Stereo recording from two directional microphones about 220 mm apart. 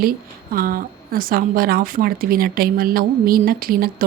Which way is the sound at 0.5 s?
40° right (ahead or behind).